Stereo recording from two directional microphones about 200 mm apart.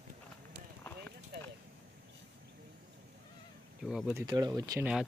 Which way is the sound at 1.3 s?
50° right (ahead or behind).